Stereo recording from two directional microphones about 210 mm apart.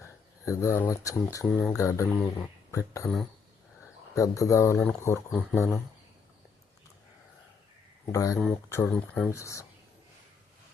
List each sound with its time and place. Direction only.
0.0 s speech: 15° left (ahead or behind)
4.1 s speech: 15° left (ahead or behind)
5.3 s speech: centre (ahead or behind)
8.1 s speech: 15° left (ahead or behind)